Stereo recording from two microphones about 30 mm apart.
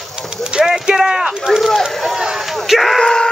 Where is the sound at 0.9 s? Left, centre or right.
Centre.